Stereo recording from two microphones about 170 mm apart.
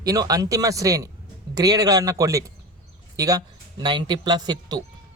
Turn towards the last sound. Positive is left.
turn(degrees=-25)  # may be behind; listen again after turning